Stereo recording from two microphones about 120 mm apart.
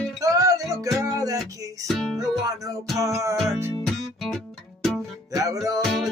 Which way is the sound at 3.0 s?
25° right (ahead or behind).